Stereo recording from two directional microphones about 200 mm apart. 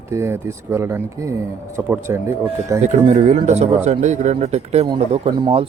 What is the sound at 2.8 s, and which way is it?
Speech, 35° right (ahead or behind).